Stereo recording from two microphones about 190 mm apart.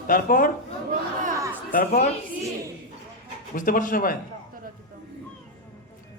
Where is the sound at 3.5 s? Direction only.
45° left (ahead or behind).